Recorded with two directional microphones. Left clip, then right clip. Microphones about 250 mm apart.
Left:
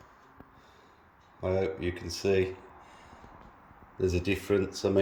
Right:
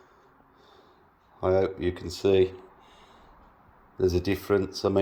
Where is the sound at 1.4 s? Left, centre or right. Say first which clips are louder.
Right 5 dB; centre.